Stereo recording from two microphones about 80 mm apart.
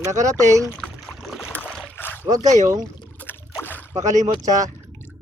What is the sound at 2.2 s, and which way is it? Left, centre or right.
Speech, right.